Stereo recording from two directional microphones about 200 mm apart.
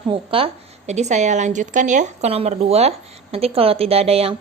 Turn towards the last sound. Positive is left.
turn(degrees=-30)  # may be behind; listen again after turning